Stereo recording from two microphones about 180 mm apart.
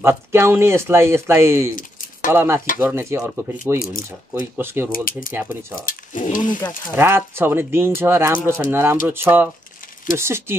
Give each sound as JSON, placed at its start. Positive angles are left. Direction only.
{"t": 0.0, "sound": "speech", "side_deg": -15}
{"t": 5.9, "sound": "speech", "side_deg": 45}
{"t": 7.0, "sound": "speech", "side_deg": -15}